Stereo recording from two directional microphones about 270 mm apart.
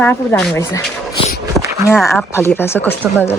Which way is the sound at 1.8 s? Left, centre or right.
Centre.